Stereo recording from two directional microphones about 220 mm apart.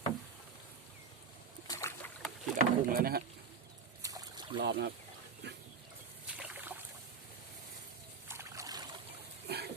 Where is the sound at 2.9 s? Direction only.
40° right (ahead or behind).